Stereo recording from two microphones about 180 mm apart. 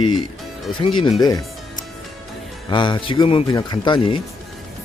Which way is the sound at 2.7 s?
25° left (ahead or behind).